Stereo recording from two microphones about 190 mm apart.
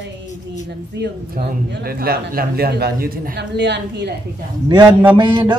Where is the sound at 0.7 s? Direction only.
60° right (ahead or behind).